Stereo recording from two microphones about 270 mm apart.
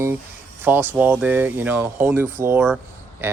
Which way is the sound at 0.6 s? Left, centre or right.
Centre.